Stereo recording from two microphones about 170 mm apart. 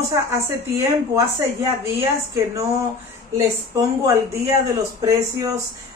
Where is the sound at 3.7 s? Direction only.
20° right (ahead or behind).